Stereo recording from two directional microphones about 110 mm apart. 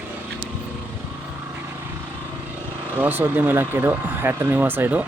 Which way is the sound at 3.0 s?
20° right (ahead or behind).